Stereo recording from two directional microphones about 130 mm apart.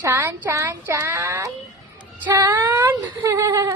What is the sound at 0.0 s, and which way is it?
Speech, 20° right (ahead or behind).